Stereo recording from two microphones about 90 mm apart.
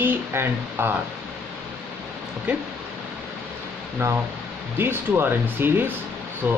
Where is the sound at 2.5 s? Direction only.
15° right (ahead or behind).